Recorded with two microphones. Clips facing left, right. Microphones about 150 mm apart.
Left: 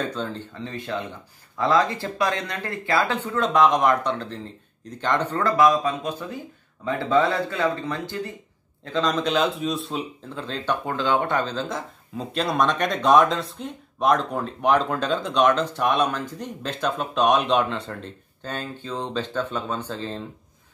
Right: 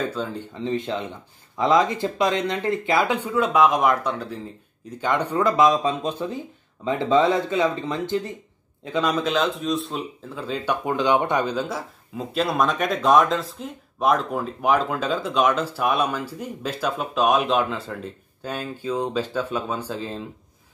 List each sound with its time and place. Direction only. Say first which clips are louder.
0.0 s speech: right 1 dB; 5° right (ahead or behind)